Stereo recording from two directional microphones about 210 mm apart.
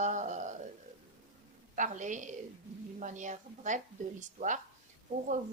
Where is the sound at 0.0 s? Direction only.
35° right (ahead or behind).